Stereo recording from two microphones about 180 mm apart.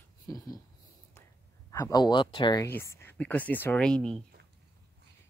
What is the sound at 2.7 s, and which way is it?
Speech, 15° left (ahead or behind).